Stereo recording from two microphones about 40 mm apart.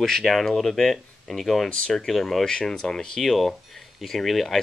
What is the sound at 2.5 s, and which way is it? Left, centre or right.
Speech, centre.